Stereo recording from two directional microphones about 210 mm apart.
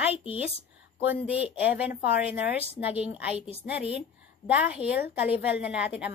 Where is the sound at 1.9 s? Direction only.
50° left (ahead or behind).